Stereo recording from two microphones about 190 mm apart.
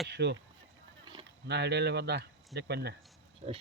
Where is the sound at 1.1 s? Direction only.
20° right (ahead or behind).